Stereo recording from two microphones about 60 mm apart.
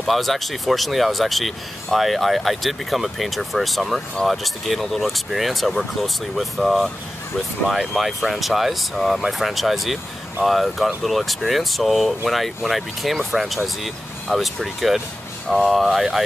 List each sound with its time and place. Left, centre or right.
0.0 s speech: centre
7.9 s speech: centre